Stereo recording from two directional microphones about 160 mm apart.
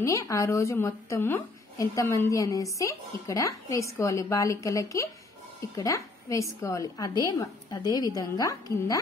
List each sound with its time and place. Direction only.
0.0 s a woman's voice: 20° left (ahead or behind)